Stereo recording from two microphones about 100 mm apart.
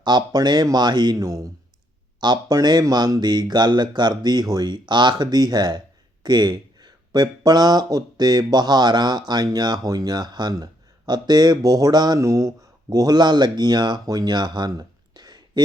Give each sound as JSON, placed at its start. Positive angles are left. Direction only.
{"t": 0.0, "sound": "speech", "side_deg": -50}